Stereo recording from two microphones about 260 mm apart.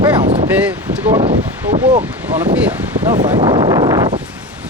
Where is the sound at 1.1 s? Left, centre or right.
Right.